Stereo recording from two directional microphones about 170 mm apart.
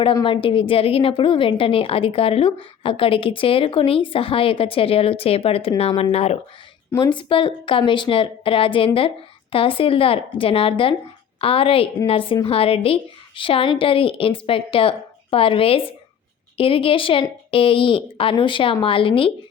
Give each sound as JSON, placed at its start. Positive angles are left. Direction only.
{"t": 0.0, "sound": "a woman's voice", "side_deg": 30}